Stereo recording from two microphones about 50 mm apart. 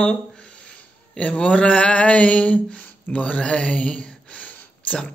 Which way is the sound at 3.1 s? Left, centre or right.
Left.